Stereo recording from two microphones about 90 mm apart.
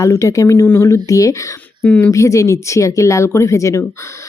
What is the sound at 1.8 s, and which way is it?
Speech, 20° left (ahead or behind).